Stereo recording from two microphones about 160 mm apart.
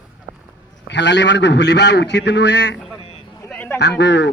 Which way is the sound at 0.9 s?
90° left.